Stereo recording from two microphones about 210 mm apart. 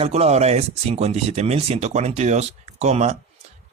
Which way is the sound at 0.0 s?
30° right (ahead or behind).